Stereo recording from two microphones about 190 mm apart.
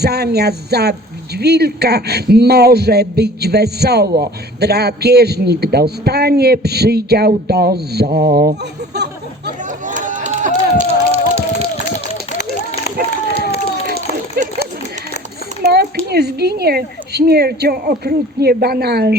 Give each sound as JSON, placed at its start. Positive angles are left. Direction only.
{"t": 0.0, "sound": "a man's voice", "side_deg": -55}
{"t": 9.6, "sound": "run", "side_deg": -40}
{"t": 14.4, "sound": "a sound", "side_deg": -55}
{"t": 15.6, "sound": "a man's voice", "side_deg": -55}